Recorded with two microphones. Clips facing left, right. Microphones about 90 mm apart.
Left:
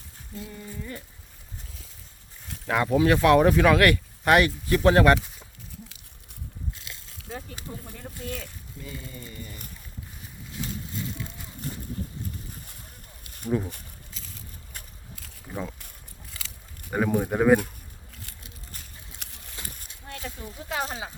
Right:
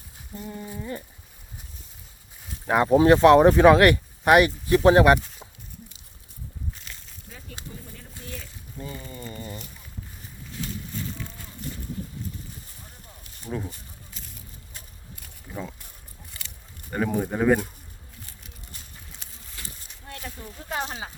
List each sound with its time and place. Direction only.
0.6 s speech: 20° right (ahead or behind)
2.6 s speech: 25° right (ahead or behind)
8.8 s speech: 35° right (ahead or behind)
13.5 s speech: centre (ahead or behind)
16.9 s speech: 5° left (ahead or behind)
19.6 s a sound: 20° left (ahead or behind)